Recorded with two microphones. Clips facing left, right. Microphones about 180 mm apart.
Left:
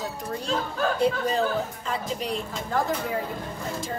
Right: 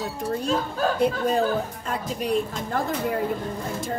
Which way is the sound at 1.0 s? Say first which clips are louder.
Right 2 dB; 55° right (ahead or behind).